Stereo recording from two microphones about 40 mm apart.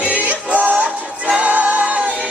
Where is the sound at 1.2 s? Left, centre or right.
Right.